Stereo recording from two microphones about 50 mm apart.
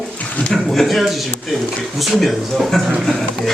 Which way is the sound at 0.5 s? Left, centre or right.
Centre.